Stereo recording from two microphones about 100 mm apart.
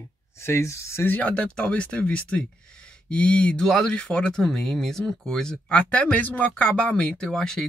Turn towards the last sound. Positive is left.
turn(degrees=5)  # may be behind; listen again after turning